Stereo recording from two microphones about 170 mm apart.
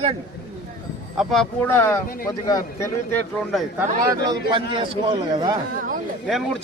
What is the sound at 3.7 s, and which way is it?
Speech, 20° right (ahead or behind).